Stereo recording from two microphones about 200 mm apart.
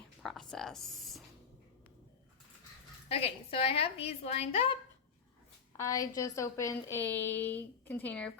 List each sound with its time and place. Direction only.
0.2 s a sound: centre (ahead or behind)
3.1 s a woman's voice: 30° left (ahead or behind)
5.7 s a woman's voice: 15° left (ahead or behind)